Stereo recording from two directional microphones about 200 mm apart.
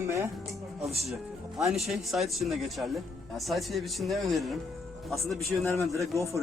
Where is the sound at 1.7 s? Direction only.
Centre (ahead or behind).